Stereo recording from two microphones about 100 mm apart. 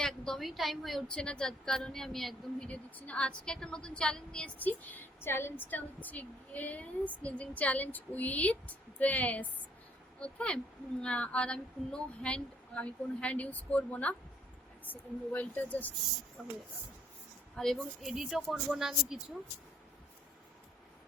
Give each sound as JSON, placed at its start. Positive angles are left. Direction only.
{"t": 0.0, "sound": "a woman's voice", "side_deg": 5}
{"t": 16.4, "sound": "speech", "side_deg": 0}
{"t": 17.6, "sound": "speech", "side_deg": 0}